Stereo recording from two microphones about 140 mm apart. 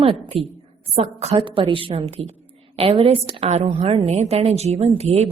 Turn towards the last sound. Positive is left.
turn(degrees=-50)  # may be behind; listen again after turning